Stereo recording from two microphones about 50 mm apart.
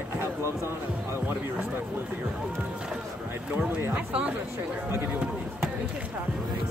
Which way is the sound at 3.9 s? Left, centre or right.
Right.